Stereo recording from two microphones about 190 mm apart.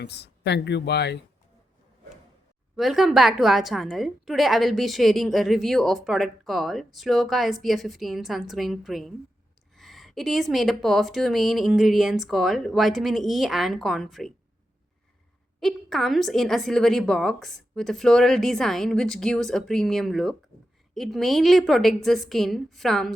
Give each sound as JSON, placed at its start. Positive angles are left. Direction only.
{"t": 0.0, "sound": "speech", "side_deg": 60}
{"t": 2.7, "sound": "a woman's voice", "side_deg": 0}
{"t": 15.6, "sound": "a woman's voice", "side_deg": 0}